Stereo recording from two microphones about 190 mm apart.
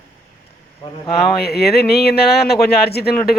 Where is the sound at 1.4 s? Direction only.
55° left (ahead or behind).